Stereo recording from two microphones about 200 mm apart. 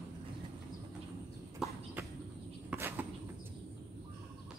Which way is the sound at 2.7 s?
10° right (ahead or behind).